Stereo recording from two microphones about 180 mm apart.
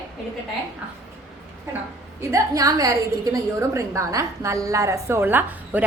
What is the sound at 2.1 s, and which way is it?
A woman's voice, 20° right (ahead or behind).